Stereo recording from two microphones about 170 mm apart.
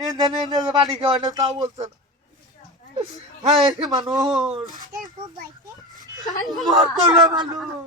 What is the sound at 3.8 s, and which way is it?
Speech, 25° right (ahead or behind).